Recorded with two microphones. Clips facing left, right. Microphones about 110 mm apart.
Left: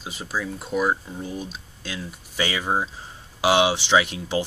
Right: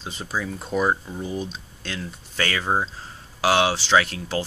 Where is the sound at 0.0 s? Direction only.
5° left (ahead or behind).